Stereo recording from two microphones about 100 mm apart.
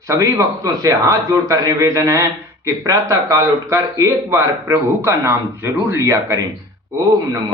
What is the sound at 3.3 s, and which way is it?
Speech, 30° right (ahead or behind).